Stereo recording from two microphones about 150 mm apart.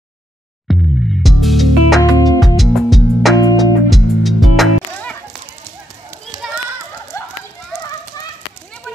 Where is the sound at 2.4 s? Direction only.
Centre (ahead or behind).